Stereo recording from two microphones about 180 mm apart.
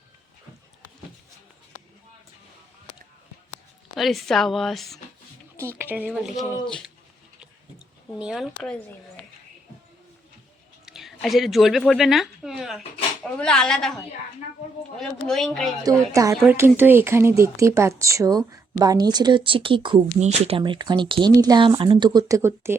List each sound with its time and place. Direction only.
3.9 s speech: centre (ahead or behind)
5.5 s speech: 15° right (ahead or behind)
6.4 s speech: 20° left (ahead or behind)
6.7 s speech: 5° left (ahead or behind)
8.2 s speech: 5° right (ahead or behind)
10.8 s speech: centre (ahead or behind)
14.9 s speech: centre (ahead or behind)
15.8 s speech: 20° right (ahead or behind)